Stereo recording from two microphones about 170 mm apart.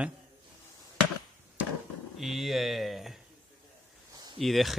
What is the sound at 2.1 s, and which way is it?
Speech, centre (ahead or behind).